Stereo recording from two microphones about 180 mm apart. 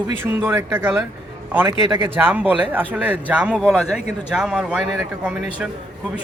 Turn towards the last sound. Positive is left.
turn(degrees=-5)  # may be behind; listen again after turning